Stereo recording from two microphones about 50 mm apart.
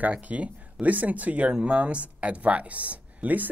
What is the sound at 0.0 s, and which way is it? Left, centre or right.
Speech, right.